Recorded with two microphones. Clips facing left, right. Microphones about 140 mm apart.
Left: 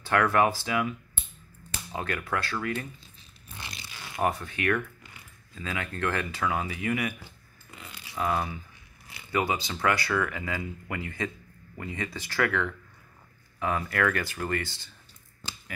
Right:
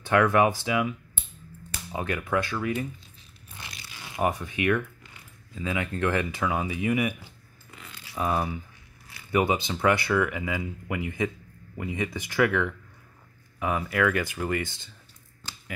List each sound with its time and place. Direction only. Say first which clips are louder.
0.0 s speech: right 2 dB; 20° right (ahead or behind)
3.5 s zipper: left 1 dB; 30° left (ahead or behind)
4.2 s speech: right 2 dB; 15° right (ahead or behind)